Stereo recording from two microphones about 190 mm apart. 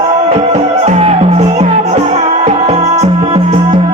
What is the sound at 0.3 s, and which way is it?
Music, 35° right (ahead or behind).